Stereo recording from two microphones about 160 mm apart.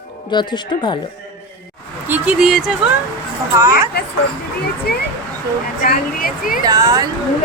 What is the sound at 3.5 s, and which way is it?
Speech, 20° right (ahead or behind).